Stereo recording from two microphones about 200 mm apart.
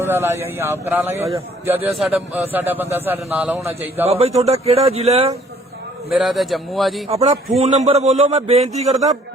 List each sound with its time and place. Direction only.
0.0 s a man's voice: 10° right (ahead or behind)
4.0 s a man's voice: 30° right (ahead or behind)
6.1 s a man's voice: centre (ahead or behind)
7.6 s a man's voice: 35° right (ahead or behind)